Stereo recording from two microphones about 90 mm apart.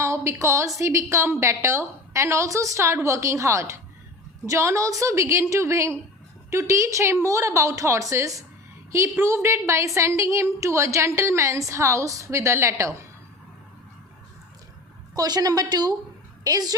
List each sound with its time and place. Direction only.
0.0 s a woman's voice: 30° right (ahead or behind)
15.1 s a woman's voice: 45° right (ahead or behind)